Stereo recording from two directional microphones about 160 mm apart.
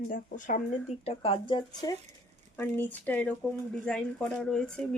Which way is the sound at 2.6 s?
10° left (ahead or behind).